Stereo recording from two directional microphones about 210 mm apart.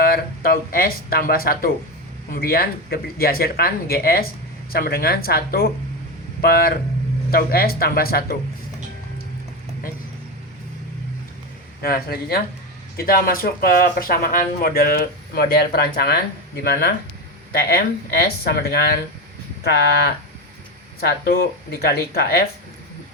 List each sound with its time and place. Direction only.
0.0 s speech: 45° left (ahead or behind)
11.8 s speech: 45° left (ahead or behind)
17.5 s speech: 50° left (ahead or behind)